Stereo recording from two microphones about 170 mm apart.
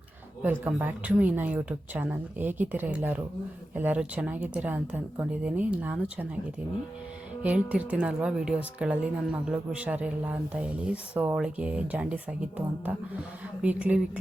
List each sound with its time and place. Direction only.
0.4 s speech: 10° right (ahead or behind)
7.4 s speech: 10° right (ahead or behind)